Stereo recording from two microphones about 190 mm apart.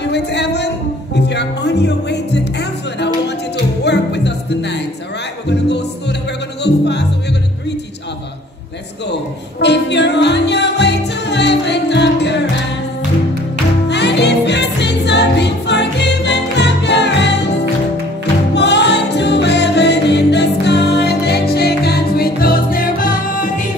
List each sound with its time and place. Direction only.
0.1 s speech: 65° left (ahead or behind)
1.1 s music: 65° left (ahead or behind)
9.6 s music: 65° left (ahead or behind)
13.8 s music: 65° left (ahead or behind); by 23.7 s 45° left (ahead or behind)